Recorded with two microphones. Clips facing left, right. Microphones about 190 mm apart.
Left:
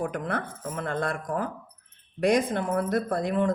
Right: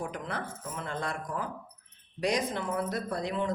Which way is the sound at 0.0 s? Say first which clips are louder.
Left 6 dB; 55° left (ahead or behind).